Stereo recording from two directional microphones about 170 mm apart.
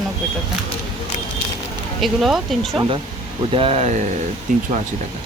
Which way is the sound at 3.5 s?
35° right (ahead or behind).